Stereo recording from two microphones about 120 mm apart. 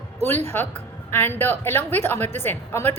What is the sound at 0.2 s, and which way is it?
A woman's voice, 20° left (ahead or behind).